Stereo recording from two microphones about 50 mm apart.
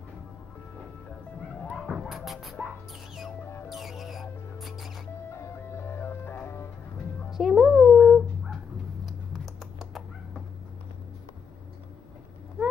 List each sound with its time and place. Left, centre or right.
1.9 s dog: centre
2.6 s music: centre
3.6 s music: centre
5.3 s music: left
7.2 s a sound: centre